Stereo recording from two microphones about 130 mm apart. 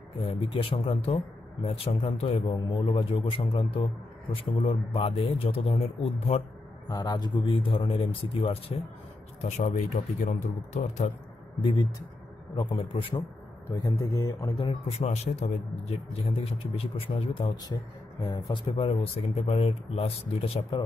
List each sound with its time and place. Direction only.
0.2 s speech: 45° left (ahead or behind)
2.4 s speech: 40° left (ahead or behind)
6.9 s a man's voice: 30° left (ahead or behind)
9.4 s speech: 75° left (ahead or behind)
12.5 s a man's voice: 40° left (ahead or behind)
13.7 s a man's voice: 25° left (ahead or behind)
14.9 s a man's voice: 55° left (ahead or behind); by 18.6 s 30° left (ahead or behind)
18.8 s speech: 50° left (ahead or behind)